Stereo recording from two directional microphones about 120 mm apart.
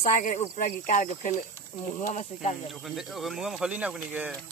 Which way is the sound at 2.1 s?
70° left (ahead or behind).